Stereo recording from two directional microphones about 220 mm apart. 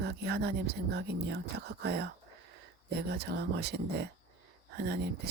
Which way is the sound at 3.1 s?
45° right (ahead or behind).